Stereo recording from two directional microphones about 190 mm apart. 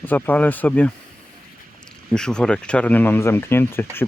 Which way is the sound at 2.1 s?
5° left (ahead or behind).